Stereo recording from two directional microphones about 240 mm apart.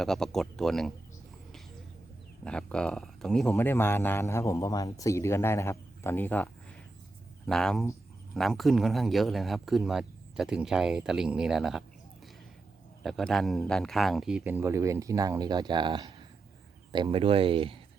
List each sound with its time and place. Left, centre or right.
0.0 s a man's voice: centre
2.4 s a man's voice: centre
13.0 s a man's voice: centre; by 17.7 s right